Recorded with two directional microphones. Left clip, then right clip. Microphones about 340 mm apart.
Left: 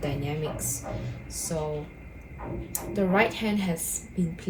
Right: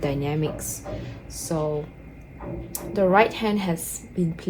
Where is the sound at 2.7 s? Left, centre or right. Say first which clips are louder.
Right 7 dB; centre.